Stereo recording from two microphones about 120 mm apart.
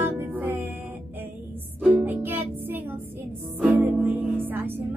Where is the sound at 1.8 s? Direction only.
15° right (ahead or behind).